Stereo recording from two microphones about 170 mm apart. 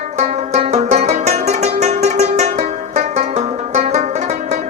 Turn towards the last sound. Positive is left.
turn(degrees=-40)  # may be behind; listen again after turning